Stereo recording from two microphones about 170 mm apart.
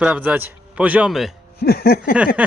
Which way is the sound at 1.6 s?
65° left (ahead or behind).